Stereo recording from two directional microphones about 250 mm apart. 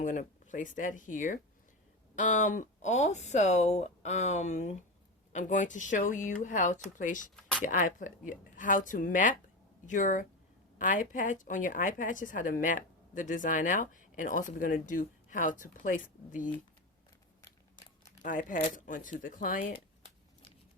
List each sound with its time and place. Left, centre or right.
0.0 s a woman's voice: left
17.4 s scissors: centre
18.2 s a woman's voice: left